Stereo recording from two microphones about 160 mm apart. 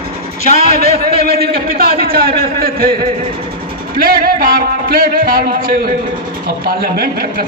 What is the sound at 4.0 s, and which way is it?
A man's voice, 65° right (ahead or behind).